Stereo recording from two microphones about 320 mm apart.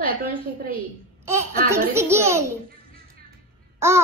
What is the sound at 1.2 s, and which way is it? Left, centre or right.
A child's voice, centre.